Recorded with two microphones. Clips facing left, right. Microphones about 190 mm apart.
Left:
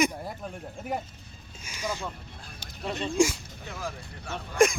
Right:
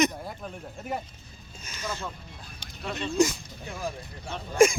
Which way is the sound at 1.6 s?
10° left (ahead or behind).